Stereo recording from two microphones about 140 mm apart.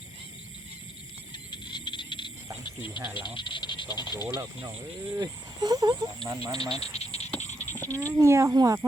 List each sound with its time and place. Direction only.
1.3 s a sound: 30° left (ahead or behind)
3.2 s speech: 35° left (ahead or behind)
5.1 s speech: 30° right (ahead or behind)
6.9 s frog: 50° left (ahead or behind)
7.7 s frog: 15° left (ahead or behind)
7.9 s speech: 20° right (ahead or behind)